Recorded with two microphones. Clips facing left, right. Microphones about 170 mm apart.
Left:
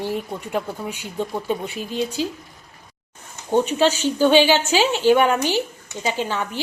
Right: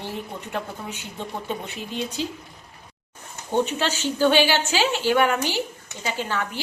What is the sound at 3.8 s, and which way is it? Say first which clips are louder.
A woman's voice: left 4 dB; 15° left (ahead or behind).